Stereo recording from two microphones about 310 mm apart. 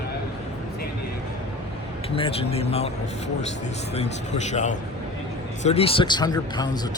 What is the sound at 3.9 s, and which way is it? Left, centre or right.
Speech, left.